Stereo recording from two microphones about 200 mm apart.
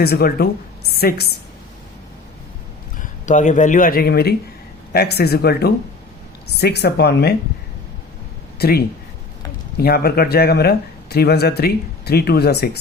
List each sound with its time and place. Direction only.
0.0 s a woman's voice: 50° left (ahead or behind)
3.0 s speech: 40° left (ahead or behind); by 7.3 s 55° left (ahead or behind)
8.5 s speech: 50° left (ahead or behind)